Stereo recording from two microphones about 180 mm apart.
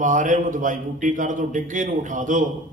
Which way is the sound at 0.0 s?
45° right (ahead or behind).